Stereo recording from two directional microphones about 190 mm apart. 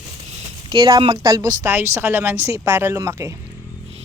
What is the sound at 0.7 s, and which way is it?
A woman's voice, 20° right (ahead or behind).